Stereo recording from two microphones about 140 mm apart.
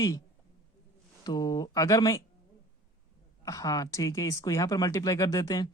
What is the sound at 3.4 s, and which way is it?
Speech, 25° left (ahead or behind).